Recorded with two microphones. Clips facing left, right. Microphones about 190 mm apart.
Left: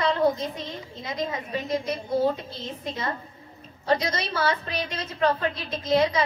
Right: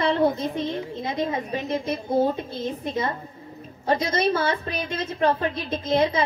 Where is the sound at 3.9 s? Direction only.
50° right (ahead or behind).